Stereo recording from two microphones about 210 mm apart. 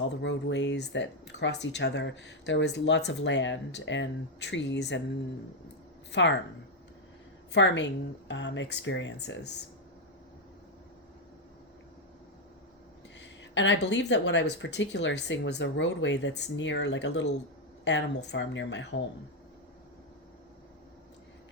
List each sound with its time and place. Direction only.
0.2 s speech: 60° left (ahead or behind)
6.1 s speech: 60° left (ahead or behind)
7.5 s speech: 55° left (ahead or behind)
13.1 s speech: 60° left (ahead or behind)